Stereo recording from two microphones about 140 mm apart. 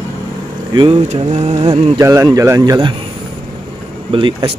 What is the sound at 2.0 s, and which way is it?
Speech, 25° right (ahead or behind).